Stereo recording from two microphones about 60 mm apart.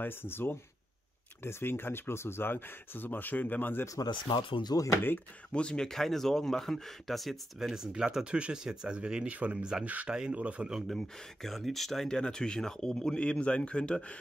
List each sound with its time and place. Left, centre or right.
0.0 s speech: left
3.8 s speech: left
4.7 s speech: left
5.5 s speech: centre
7.5 s speech: centre
11.0 s speech: centre